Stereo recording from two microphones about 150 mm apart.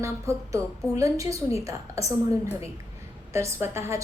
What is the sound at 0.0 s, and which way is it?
A woman's voice, 20° right (ahead or behind).